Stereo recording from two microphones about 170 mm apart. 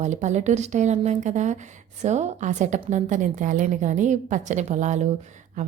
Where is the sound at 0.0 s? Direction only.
45° right (ahead or behind).